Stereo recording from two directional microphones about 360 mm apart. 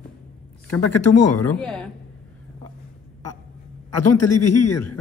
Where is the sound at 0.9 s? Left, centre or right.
Left.